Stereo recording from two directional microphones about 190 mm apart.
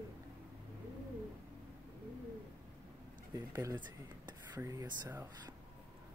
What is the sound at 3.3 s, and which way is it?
Speech, 20° right (ahead or behind).